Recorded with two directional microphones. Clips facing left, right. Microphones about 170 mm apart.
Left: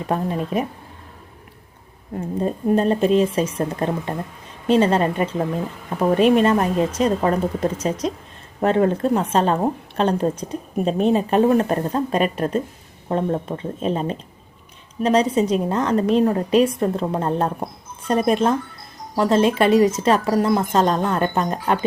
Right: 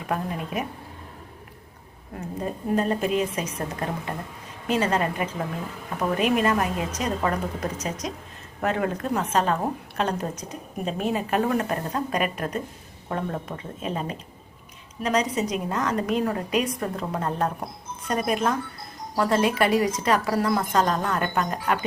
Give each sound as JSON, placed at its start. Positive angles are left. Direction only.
{"t": 0.1, "sound": "speech", "side_deg": 30}
{"t": 2.4, "sound": "speech", "side_deg": 30}